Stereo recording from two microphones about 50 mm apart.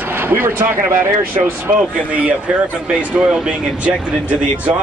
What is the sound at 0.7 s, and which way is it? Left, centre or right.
Speech, right.